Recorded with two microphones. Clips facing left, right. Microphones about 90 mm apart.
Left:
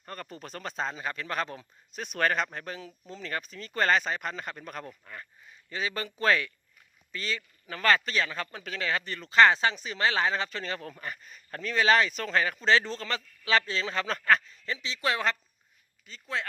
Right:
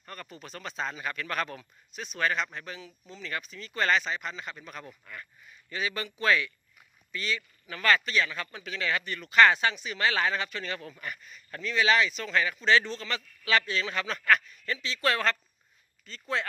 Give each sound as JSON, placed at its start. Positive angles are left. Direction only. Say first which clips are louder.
{"t": 0.0, "sound": "speech", "louder": "left 3 dB", "side_deg": 35}
{"t": 2.0, "sound": "a man's voice", "louder": "left 2 dB", "side_deg": 50}
{"t": 16.2, "sound": "speech", "louder": "right 2 dB", "side_deg": 0}